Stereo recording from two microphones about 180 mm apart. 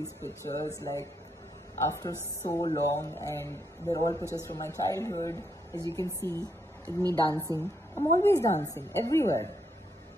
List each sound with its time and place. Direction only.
0.0 s a woman's voice: 15° left (ahead or behind)
7.0 s a woman's voice: 20° right (ahead or behind)
7.5 s a woman's voice: 15° left (ahead or behind)